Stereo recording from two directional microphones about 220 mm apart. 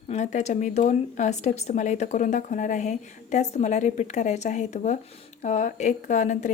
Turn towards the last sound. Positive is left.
turn(degrees=35)  # may be behind; listen again after turning